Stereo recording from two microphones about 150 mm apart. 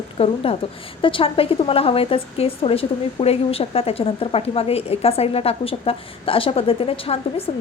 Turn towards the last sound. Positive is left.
turn(degrees=40)  # may be behind; listen again after turning